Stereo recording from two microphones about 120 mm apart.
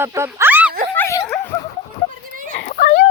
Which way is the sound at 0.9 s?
15° left (ahead or behind).